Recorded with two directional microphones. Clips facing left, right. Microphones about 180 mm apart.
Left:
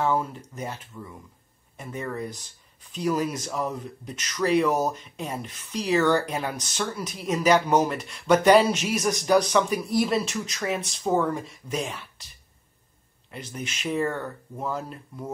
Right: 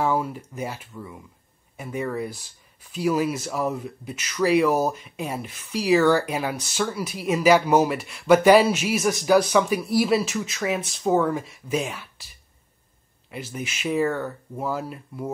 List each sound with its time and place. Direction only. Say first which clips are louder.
0.0 s speech: right 1 dB; 10° right (ahead or behind)
13.3 s speech: right 3 dB; 5° right (ahead or behind)